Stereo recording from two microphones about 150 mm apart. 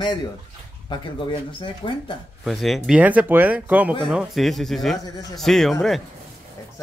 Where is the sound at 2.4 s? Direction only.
Centre (ahead or behind).